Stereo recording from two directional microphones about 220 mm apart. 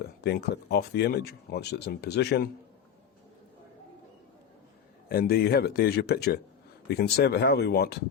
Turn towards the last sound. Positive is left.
turn(degrees=45)  # may be behind; listen again after turning